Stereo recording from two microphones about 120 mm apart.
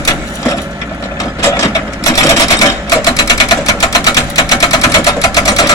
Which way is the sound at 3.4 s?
30° left (ahead or behind).